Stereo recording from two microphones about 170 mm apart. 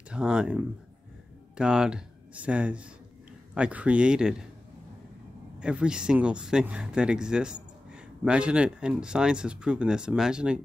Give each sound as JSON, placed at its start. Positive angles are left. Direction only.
{"t": 0.1, "sound": "speech", "side_deg": -5}
{"t": 5.6, "sound": "speech", "side_deg": -5}